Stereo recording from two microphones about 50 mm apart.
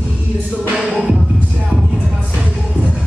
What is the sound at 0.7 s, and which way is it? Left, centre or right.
Music, centre.